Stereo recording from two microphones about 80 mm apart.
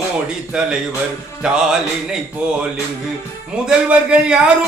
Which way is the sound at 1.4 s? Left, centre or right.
Centre.